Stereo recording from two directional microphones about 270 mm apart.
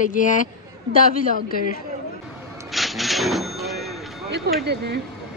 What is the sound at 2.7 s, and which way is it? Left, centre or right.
Cash register, centre.